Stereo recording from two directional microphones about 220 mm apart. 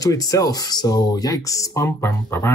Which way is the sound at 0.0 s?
15° left (ahead or behind).